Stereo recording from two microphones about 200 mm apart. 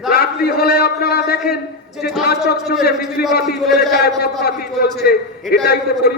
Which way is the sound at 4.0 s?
55° left (ahead or behind).